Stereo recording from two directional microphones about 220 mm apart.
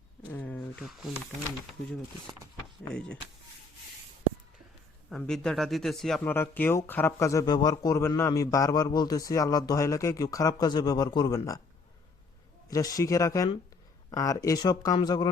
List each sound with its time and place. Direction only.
0.3 s speech: 10° left (ahead or behind)
2.9 s speech: 5° left (ahead or behind)
5.0 s speech: centre (ahead or behind)
12.6 s speech: 15° left (ahead or behind)